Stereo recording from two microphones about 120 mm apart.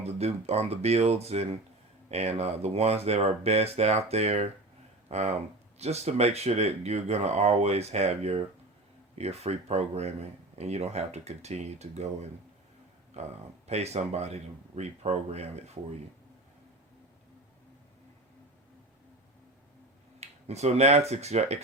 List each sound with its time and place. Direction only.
0.0 s speech: 60° right (ahead or behind)
20.1 s speech: 65° right (ahead or behind)